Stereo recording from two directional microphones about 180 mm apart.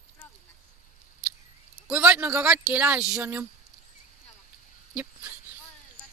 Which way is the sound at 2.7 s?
10° right (ahead or behind).